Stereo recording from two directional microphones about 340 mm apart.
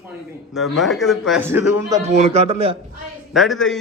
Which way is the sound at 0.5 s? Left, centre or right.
Centre.